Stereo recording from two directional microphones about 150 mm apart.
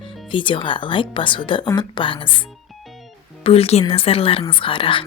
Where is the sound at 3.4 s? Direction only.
40° left (ahead or behind).